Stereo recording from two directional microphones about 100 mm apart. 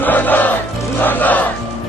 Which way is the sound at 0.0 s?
15° left (ahead or behind).